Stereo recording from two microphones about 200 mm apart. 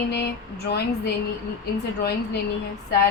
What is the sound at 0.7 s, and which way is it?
Speech, 50° left (ahead or behind).